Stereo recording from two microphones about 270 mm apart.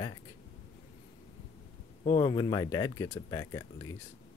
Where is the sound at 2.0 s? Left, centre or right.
Centre.